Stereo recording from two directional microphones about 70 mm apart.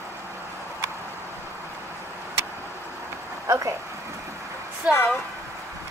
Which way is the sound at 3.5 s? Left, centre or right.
Right.